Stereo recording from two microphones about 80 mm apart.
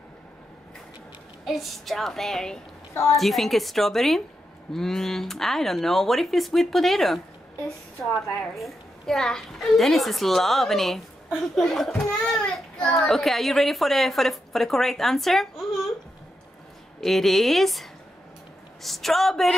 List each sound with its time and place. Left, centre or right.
1.4 s a child's voice: centre
2.9 s a woman's voice: left
3.2 s a child's voice: centre
17.0 s a child's voice: centre